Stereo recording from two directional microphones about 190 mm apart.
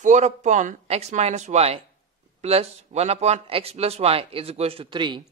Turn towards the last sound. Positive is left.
turn(degrees=-25)  # may be behind; listen again after turning